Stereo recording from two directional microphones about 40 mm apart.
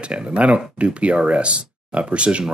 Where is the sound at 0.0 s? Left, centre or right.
Right.